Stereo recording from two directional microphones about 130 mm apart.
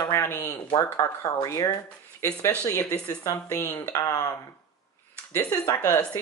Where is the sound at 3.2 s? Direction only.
25° left (ahead or behind).